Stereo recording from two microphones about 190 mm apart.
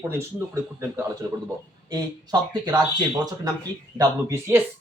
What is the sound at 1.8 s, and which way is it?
Speech, 20° right (ahead or behind).